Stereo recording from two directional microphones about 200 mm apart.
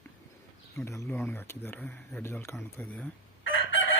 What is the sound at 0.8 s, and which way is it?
Speech, 15° left (ahead or behind).